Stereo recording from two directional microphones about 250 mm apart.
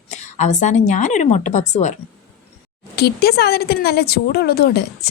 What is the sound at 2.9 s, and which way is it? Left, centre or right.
Speech, left.